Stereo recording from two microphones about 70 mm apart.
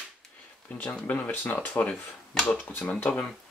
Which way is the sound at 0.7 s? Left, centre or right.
Left.